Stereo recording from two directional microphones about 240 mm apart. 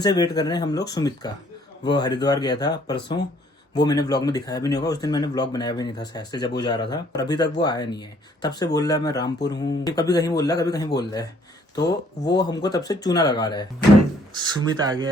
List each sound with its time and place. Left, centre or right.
0.0 s speech: centre
14.7 s speech: centre